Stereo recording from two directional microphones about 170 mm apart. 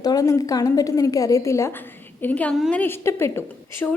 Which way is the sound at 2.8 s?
15° left (ahead or behind).